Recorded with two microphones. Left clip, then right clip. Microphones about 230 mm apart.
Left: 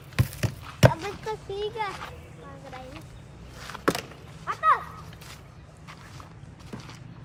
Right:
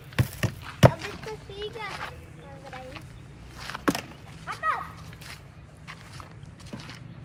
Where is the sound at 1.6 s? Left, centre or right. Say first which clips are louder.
Left 5 dB; centre.